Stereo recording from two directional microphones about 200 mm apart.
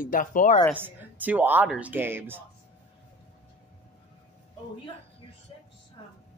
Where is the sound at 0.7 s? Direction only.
10° right (ahead or behind).